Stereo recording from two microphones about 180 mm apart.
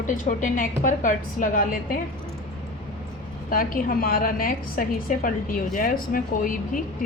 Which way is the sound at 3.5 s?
50° left (ahead or behind).